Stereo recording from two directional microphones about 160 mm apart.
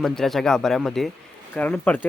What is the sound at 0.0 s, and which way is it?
Speech, centre (ahead or behind).